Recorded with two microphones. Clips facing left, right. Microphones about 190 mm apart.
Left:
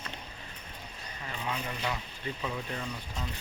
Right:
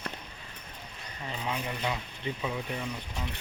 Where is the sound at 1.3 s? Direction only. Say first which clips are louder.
Right 2 dB; 20° right (ahead or behind).